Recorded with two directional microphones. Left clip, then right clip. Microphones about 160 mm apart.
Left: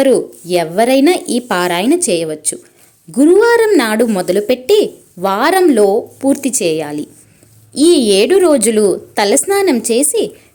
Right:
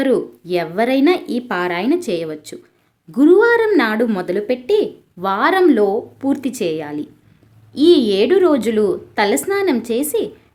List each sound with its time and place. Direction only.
0.0 s a woman's voice: 20° left (ahead or behind)